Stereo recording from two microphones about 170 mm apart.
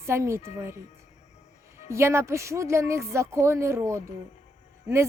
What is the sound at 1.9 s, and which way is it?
Speech, 15° right (ahead or behind).